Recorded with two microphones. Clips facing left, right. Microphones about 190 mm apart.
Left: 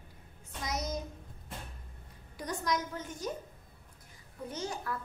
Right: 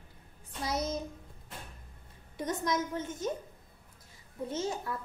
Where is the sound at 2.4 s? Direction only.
20° right (ahead or behind).